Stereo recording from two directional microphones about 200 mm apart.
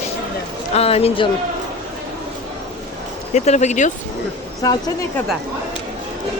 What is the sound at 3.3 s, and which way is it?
Speech, 35° left (ahead or behind).